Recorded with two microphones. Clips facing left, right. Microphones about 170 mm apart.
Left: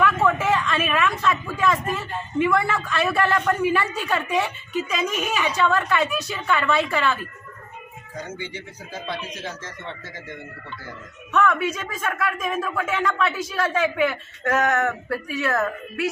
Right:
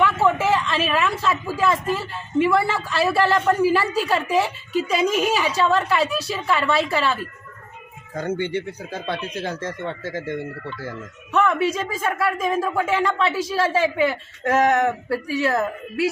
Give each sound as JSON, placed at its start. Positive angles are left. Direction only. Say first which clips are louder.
{"t": 0.5, "sound": "speech", "louder": "right 1 dB", "side_deg": -30}
{"t": 8.1, "sound": "speech", "louder": "right 9 dB", "side_deg": -55}
{"t": 11.3, "sound": "speech", "louder": "right 2 dB", "side_deg": -30}